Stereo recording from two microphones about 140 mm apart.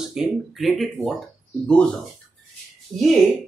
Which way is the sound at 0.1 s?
Centre (ahead or behind).